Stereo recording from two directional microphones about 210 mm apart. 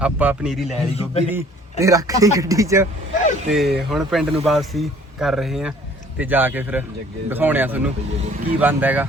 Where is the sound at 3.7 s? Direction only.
Centre (ahead or behind).